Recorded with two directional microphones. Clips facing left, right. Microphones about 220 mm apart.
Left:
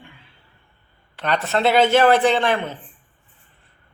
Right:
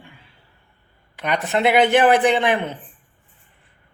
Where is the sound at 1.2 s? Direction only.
15° right (ahead or behind).